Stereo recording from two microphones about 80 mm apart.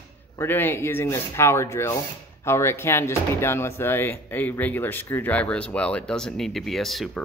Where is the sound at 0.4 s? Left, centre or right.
Left.